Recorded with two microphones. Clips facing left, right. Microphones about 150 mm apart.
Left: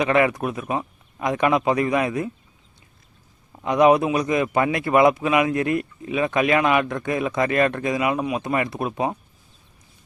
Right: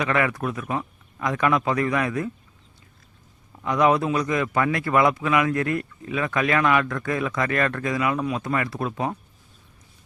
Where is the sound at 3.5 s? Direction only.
20° left (ahead or behind).